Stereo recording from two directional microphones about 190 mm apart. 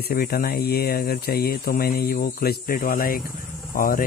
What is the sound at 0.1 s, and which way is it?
Speech, 55° left (ahead or behind).